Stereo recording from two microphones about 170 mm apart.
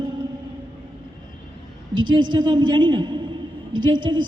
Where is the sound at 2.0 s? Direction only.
25° right (ahead or behind).